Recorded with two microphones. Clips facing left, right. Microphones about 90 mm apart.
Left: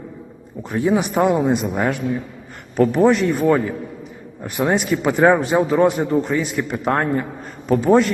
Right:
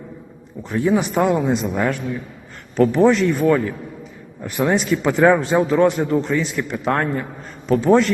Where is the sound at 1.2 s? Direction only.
45° left (ahead or behind).